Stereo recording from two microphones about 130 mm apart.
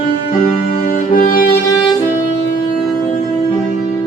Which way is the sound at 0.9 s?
90° left.